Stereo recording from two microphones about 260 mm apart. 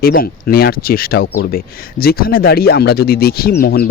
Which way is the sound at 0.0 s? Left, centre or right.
Left.